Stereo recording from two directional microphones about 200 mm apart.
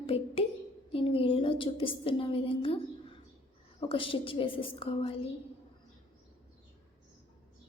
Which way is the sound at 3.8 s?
25° left (ahead or behind).